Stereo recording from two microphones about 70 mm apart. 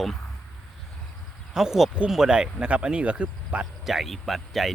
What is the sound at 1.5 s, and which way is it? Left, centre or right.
Speech, centre.